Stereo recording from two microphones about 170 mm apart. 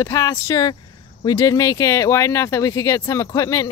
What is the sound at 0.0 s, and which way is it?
Speech, 20° left (ahead or behind).